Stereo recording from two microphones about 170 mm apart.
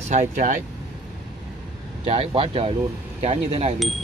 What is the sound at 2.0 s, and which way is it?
Speech, 35° right (ahead or behind).